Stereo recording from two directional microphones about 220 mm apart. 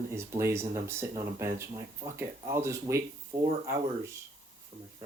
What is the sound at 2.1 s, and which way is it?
Speech, 10° right (ahead or behind).